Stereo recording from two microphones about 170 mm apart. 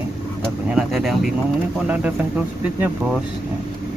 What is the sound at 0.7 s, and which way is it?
Speech, centre (ahead or behind).